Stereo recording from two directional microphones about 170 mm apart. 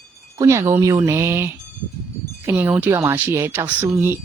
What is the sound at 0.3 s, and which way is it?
Speech, 15° right (ahead or behind).